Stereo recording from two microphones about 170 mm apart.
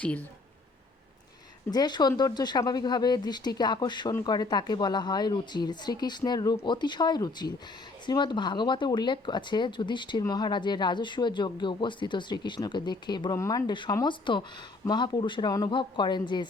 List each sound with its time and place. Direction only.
0.0 s speech: 10° left (ahead or behind)
1.7 s speech: 25° left (ahead or behind)